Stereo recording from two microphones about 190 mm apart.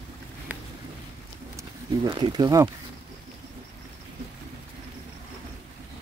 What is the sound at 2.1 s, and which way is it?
Speech, 25° right (ahead or behind).